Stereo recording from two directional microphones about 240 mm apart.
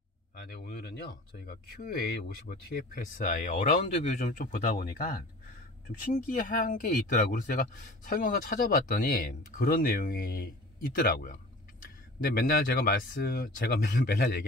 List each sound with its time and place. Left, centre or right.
0.4 s speech: left
6.1 s speech: left
12.4 s speech: left